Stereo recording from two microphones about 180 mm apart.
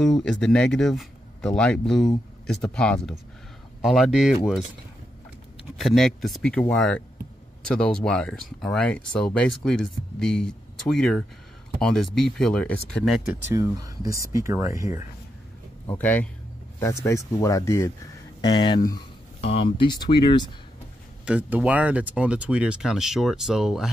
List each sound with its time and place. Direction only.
0.0 s speech: 5° left (ahead or behind)
5.8 s speech: centre (ahead or behind)
13.5 s speech: 20° right (ahead or behind)
16.0 s speech: 10° left (ahead or behind)
18.5 s speech: 25° left (ahead or behind)
21.3 s speech: 10° right (ahead or behind)